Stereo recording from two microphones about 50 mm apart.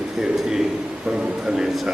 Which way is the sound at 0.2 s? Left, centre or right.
Centre.